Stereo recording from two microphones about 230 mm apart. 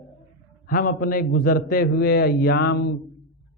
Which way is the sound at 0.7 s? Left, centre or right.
Left.